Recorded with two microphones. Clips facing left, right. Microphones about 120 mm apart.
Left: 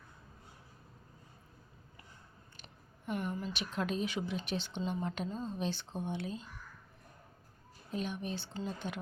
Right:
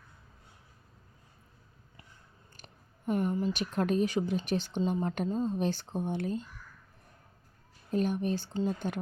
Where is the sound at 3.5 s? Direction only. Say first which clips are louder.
Right 7 dB; 45° right (ahead or behind).